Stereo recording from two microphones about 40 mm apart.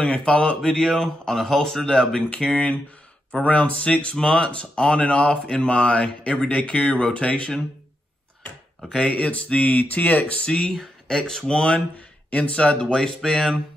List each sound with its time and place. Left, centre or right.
0.2 s speech: left
2.2 s speech: left
8.8 s speech: left
9.1 s speech: left
10.4 s speech: left
12.9 s speech: centre